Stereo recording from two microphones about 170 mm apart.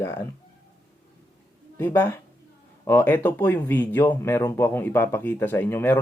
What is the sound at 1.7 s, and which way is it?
Speech, 10° left (ahead or behind).